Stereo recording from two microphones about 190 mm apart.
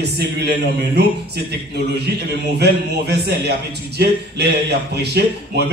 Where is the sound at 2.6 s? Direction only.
60° right (ahead or behind).